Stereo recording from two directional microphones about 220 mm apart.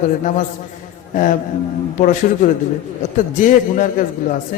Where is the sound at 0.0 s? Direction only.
35° left (ahead or behind).